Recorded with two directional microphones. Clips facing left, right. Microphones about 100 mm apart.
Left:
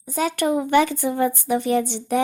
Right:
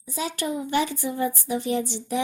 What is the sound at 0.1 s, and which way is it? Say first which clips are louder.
Speech: left 7 dB; 55° left (ahead or behind).